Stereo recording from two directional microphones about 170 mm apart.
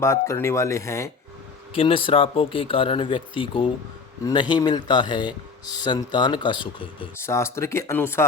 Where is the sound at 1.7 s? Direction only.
30° left (ahead or behind).